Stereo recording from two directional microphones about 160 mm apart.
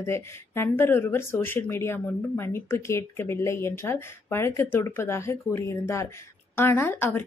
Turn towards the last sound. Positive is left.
turn(degrees=15)  # may be behind; listen again after turning